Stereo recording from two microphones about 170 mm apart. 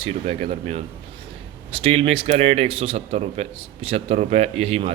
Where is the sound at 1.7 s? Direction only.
35° right (ahead or behind).